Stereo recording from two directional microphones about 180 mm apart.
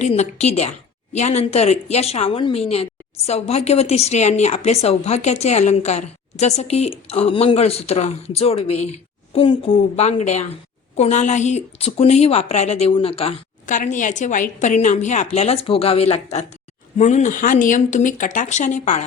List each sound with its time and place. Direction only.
0.0 s a woman's voice: 40° left (ahead or behind)